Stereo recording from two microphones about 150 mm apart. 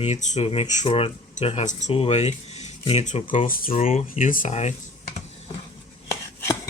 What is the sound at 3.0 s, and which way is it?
Speech, 55° left (ahead or behind).